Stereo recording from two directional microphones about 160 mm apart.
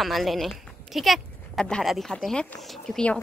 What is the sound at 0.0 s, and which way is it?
Speech, centre (ahead or behind).